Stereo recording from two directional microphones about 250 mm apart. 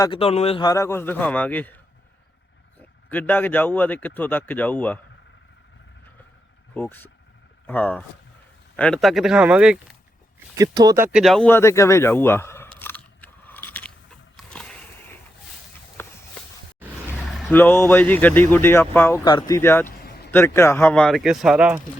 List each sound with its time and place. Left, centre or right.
0.0 s speech: left
3.1 s speech: centre
6.7 s speech: centre
12.8 s biting: centre
14.3 s a sound: centre
17.2 s speech: centre
19.9 s a sound: left
20.3 s speech: centre